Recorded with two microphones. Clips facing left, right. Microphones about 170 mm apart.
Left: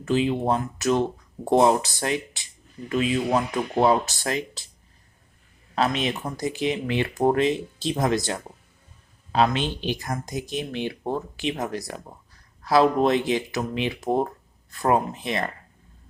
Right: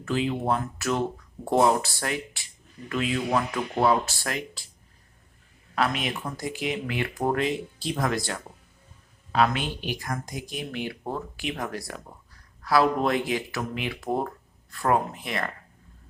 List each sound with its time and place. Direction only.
0.0 s speech: 20° left (ahead or behind)
5.7 s speech: 25° left (ahead or behind)